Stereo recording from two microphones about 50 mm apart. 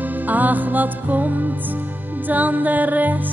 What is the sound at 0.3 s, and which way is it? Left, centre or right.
Music, right.